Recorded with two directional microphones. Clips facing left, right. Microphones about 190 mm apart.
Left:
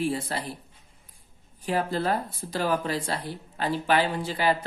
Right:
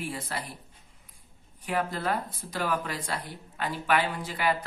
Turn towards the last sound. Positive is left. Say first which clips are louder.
# left 4 dB
turn(degrees=30)  # may be behind; listen again after turning